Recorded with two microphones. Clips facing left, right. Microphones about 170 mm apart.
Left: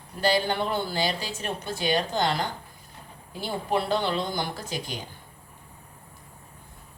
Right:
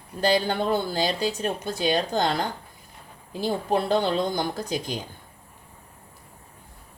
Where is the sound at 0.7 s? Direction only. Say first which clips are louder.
Right 3 dB; 40° right (ahead or behind).